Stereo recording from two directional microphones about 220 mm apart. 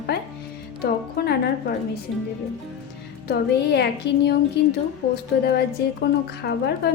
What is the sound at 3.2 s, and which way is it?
A woman's voice, 50° left (ahead or behind).